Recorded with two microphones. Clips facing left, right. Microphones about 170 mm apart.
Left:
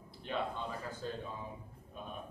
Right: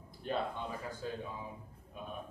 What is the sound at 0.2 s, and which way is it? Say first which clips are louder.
Speech: right 3 dB; 45° right (ahead or behind).